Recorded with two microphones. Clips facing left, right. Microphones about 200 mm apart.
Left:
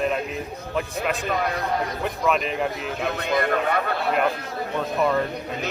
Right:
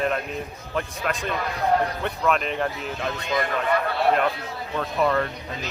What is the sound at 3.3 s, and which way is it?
Speech, 55° left (ahead or behind).